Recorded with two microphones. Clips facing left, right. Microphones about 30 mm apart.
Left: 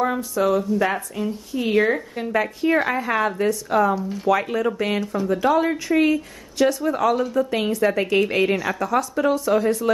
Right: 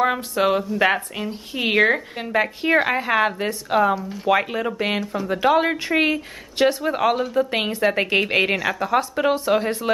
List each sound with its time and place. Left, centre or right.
0.0 s speech: right
2.2 s speech: right
4.0 s speech: centre
4.3 s speech: right
5.0 s speech: centre
5.3 s speech: right